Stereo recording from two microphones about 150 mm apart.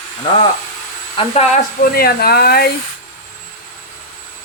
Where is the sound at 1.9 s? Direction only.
90° left.